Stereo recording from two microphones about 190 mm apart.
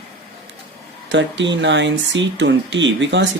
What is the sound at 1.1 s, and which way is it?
Speech, 70° right (ahead or behind).